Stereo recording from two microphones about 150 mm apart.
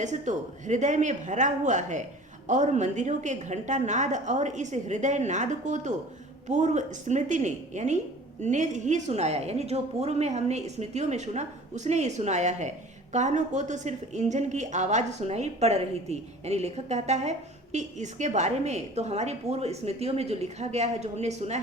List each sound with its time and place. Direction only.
0.0 s speech: 55° right (ahead or behind)